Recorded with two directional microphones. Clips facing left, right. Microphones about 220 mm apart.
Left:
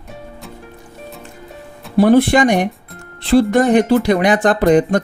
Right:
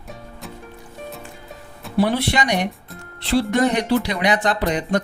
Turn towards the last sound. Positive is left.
turn(degrees=50)  # may be behind; listen again after turning